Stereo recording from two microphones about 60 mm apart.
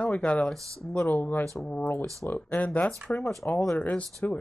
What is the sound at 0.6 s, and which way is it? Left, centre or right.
Speech, right.